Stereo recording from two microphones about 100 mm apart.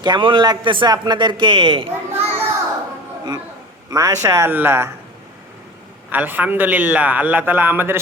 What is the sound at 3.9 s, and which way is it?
Speech, 35° right (ahead or behind).